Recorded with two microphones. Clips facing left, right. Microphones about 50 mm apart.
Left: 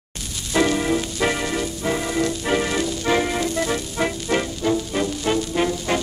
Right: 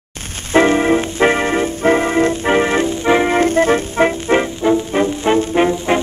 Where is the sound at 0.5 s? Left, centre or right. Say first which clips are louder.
Right 7 dB; right.